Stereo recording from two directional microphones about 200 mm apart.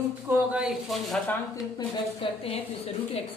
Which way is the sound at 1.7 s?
30° left (ahead or behind).